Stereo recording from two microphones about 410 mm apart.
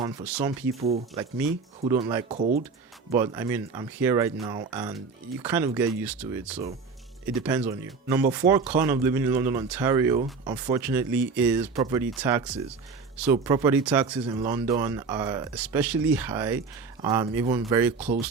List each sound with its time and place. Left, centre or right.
0.0 s speech: centre
2.3 s speech: centre
3.1 s speech: centre